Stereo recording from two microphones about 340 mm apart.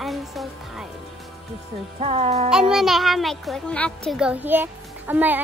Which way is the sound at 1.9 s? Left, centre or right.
Centre.